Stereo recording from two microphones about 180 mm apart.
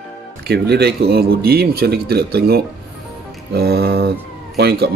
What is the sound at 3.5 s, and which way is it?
Cat, 60° right (ahead or behind).